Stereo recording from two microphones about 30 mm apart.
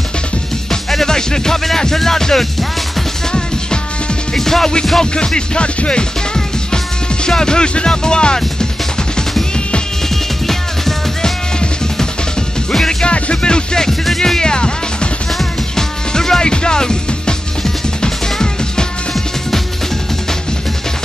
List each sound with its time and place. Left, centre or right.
0.7 s music: centre
1.0 s music: left
1.8 s speech: centre
4.4 s speech: centre
5.1 s music: left
7.2 s speech: left
10.4 s music: centre
13.0 s music: left
14.0 s speech: centre
14.4 s music: left